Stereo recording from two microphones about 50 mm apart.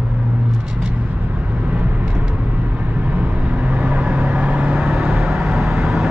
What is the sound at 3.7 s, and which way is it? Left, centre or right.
Vehicle, right.